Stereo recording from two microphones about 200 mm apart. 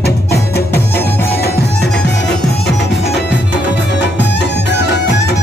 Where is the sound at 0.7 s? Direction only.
10° left (ahead or behind).